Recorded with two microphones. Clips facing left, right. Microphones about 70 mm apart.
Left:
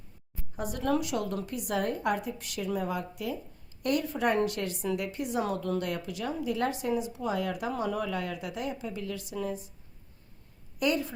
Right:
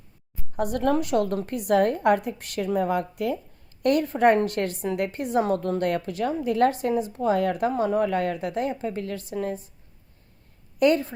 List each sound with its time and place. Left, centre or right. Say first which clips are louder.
0.5 s a woman's voice: right 6 dB; right
7.7 s a woman's voice: right 8 dB; right
10.8 s a woman's voice: right 8 dB; right